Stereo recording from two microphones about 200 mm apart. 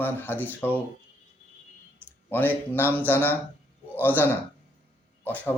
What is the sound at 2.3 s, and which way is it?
Speech, 10° left (ahead or behind).